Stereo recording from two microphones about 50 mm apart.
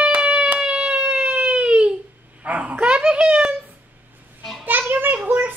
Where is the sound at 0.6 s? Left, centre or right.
Right.